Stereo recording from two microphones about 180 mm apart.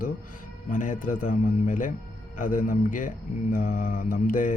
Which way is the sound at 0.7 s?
45° left (ahead or behind).